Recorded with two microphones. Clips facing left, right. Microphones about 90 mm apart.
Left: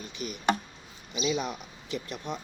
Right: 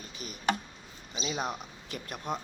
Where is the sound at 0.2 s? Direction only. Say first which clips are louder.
Left 7 dB; 45° left (ahead or behind).